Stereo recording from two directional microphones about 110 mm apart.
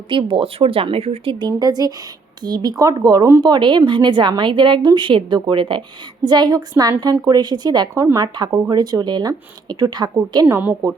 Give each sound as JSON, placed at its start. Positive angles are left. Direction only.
{"t": 0.1, "sound": "speech", "side_deg": -45}
{"t": 10.5, "sound": "a woman's voice", "side_deg": -15}